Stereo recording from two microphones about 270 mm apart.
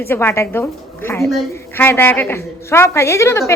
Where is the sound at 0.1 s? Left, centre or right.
Centre.